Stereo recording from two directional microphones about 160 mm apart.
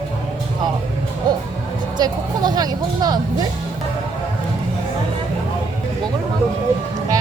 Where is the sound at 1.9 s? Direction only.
25° right (ahead or behind).